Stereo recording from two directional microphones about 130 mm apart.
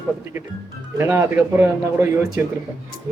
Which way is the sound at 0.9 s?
20° right (ahead or behind).